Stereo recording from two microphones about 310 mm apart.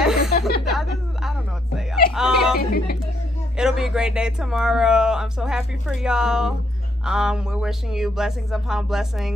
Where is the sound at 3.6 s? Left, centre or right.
Centre.